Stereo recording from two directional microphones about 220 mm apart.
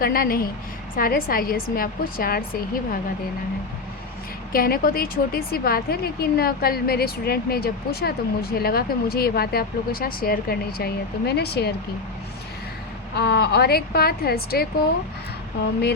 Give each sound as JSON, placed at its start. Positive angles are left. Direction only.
{"t": 0.0, "sound": "a woman's voice", "side_deg": 40}
{"t": 4.5, "sound": "a woman's voice", "side_deg": 40}
{"t": 13.1, "sound": "a woman's voice", "side_deg": 45}